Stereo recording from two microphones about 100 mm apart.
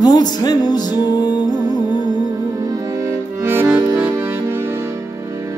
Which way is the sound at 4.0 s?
25° right (ahead or behind).